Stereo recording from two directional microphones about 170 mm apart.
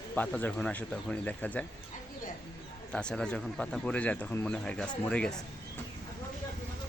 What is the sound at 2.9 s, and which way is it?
Speech, 5° left (ahead or behind).